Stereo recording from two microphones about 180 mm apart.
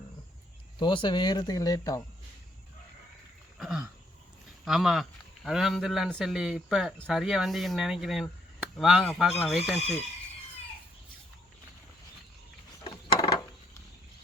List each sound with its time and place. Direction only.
0.8 s speech: 25° left (ahead or behind)
3.6 s a sound: 5° right (ahead or behind)
4.6 s speech: centre (ahead or behind)
9.7 s speech: 35° left (ahead or behind)